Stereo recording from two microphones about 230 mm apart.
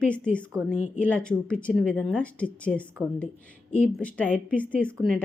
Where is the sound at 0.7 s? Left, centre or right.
Left.